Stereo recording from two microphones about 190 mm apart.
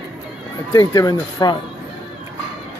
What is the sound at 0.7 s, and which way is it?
Speech, 20° left (ahead or behind).